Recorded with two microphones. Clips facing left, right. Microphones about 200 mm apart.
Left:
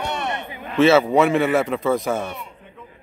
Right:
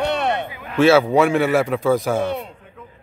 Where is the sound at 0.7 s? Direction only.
Centre (ahead or behind).